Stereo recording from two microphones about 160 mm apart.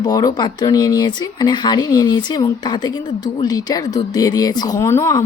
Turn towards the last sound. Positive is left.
turn(degrees=15)  # may be behind; listen again after turning